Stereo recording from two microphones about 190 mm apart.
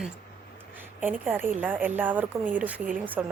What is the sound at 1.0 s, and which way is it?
Speech, 10° right (ahead or behind).